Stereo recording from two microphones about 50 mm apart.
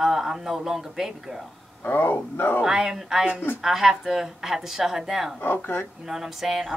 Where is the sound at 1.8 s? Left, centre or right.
Left.